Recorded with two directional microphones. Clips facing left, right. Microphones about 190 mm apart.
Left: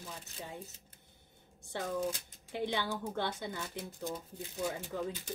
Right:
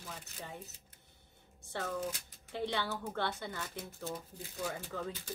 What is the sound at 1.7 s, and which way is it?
Speech, 10° left (ahead or behind).